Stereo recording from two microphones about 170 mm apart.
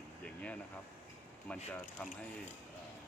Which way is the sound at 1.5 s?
10° left (ahead or behind).